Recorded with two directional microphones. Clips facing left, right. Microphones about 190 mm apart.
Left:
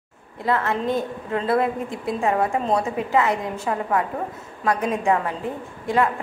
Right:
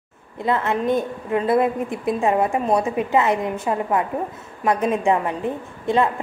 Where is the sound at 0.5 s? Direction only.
20° right (ahead or behind).